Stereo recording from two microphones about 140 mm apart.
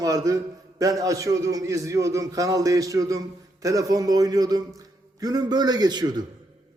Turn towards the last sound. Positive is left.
turn(degrees=-30)  # may be behind; listen again after turning